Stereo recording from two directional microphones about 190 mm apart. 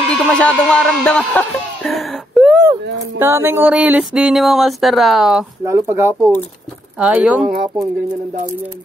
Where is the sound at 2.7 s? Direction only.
10° right (ahead or behind).